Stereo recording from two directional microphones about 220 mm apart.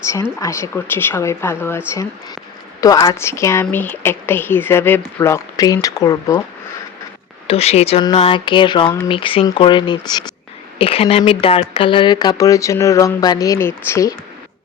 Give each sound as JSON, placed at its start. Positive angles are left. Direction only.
{"t": 0.3, "sound": "speech", "side_deg": 10}
{"t": 2.8, "sound": "speech", "side_deg": 15}
{"t": 7.4, "sound": "speech", "side_deg": 25}